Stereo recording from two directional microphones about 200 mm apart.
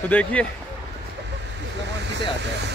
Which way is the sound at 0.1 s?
5° left (ahead or behind).